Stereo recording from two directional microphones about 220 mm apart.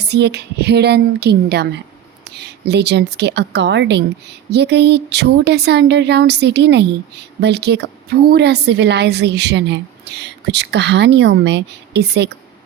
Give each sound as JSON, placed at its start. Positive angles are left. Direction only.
{"t": 0.0, "sound": "a woman's voice", "side_deg": -50}